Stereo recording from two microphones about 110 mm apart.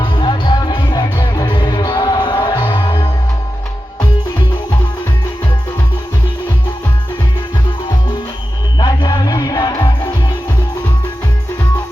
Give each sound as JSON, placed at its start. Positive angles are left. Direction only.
{"t": 0.0, "sound": "music", "side_deg": 45}
{"t": 8.8, "sound": "music", "side_deg": 40}